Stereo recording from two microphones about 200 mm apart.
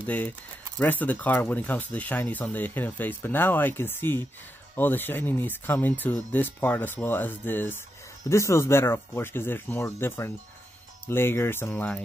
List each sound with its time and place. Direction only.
0.0 s speech: 10° left (ahead or behind)